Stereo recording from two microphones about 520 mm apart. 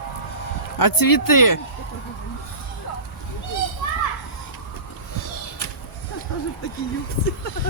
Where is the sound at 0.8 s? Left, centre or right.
Left.